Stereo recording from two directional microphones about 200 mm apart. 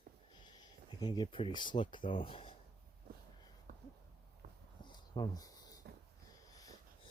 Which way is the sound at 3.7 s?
45° right (ahead or behind).